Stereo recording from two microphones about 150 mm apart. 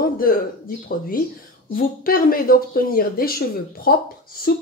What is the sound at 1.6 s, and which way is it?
A woman's voice, 75° left (ahead or behind).